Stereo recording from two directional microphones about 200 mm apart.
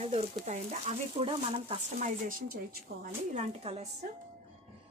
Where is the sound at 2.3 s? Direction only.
45° right (ahead or behind).